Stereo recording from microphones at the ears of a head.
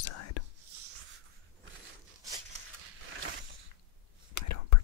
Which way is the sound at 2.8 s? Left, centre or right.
Right.